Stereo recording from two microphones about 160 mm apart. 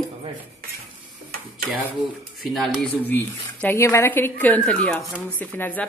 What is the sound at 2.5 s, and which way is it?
Speech, 5° right (ahead or behind).